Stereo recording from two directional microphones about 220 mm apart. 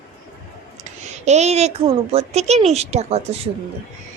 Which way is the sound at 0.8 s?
30° right (ahead or behind).